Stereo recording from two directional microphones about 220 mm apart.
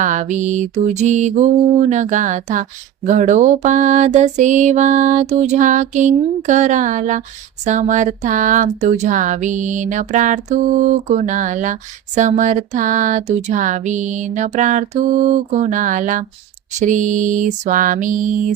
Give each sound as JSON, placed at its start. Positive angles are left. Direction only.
{"t": 0.0, "sound": "speech", "side_deg": -35}